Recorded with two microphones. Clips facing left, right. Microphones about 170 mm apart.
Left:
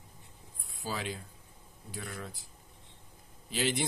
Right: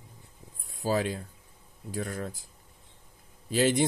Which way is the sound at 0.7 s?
45° right (ahead or behind).